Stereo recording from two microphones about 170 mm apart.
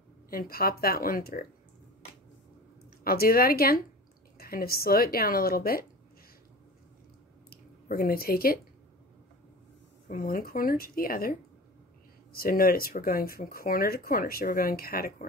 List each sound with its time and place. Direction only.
0.3 s speech: 60° left (ahead or behind)
3.0 s speech: 60° left (ahead or behind)
7.4 s a sound: 60° left (ahead or behind)
10.0 s speech: 55° left (ahead or behind)